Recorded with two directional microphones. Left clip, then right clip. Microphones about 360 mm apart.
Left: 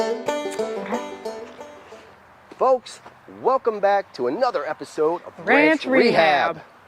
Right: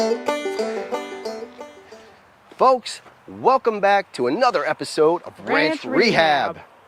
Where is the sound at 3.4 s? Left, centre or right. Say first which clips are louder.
Right 2 dB; right.